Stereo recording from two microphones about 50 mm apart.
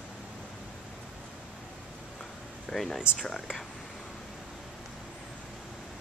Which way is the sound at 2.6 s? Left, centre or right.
Centre.